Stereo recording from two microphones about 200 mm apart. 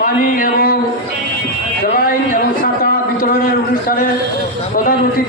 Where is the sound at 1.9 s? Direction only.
45° left (ahead or behind).